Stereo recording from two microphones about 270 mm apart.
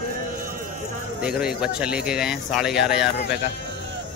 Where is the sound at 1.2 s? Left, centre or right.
Centre.